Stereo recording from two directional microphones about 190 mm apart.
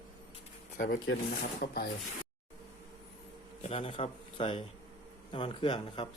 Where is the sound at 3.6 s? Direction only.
30° left (ahead or behind).